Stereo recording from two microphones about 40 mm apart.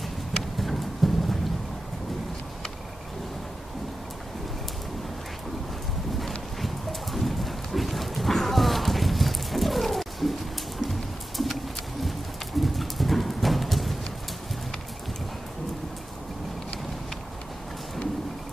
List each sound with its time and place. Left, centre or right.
0.6 s clip-clop: centre
6.1 s clip-clop: centre
10.8 s a sound: centre
12.6 s clip-clop: centre